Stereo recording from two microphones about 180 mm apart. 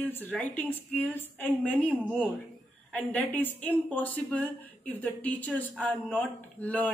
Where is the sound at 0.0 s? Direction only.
10° left (ahead or behind).